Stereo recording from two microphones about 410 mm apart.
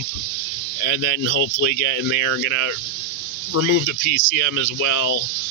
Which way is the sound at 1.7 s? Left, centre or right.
Left.